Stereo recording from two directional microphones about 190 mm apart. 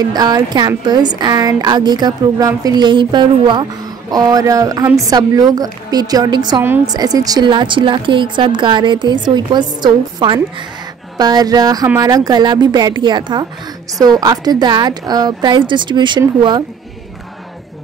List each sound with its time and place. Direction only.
0.0 s a woman's voice: 20° right (ahead or behind)